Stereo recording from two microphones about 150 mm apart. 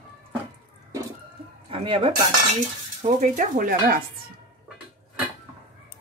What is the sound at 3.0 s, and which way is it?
Speech, 55° right (ahead or behind).